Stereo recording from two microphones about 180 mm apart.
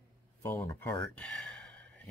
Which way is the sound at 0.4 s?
15° left (ahead or behind).